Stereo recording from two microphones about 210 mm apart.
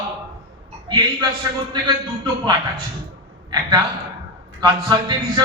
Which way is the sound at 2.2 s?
20° right (ahead or behind).